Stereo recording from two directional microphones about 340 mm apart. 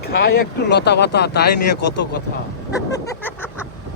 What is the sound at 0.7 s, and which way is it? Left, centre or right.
Speech, left.